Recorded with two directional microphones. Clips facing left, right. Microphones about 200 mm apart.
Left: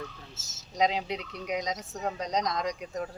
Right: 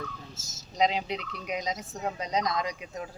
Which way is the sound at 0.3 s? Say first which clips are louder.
Right 4 dB; 10° right (ahead or behind).